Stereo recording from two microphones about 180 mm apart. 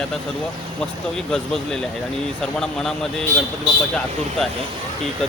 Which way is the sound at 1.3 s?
5° left (ahead or behind).